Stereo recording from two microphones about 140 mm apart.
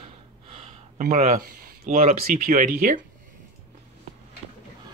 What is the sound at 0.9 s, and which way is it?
Speech, 85° right.